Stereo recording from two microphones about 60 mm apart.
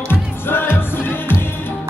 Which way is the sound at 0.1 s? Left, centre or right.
Left.